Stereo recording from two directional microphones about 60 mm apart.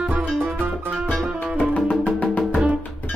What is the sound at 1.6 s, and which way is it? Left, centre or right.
Music, left.